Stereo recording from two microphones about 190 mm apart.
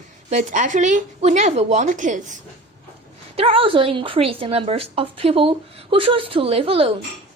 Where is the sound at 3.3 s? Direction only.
30° right (ahead or behind).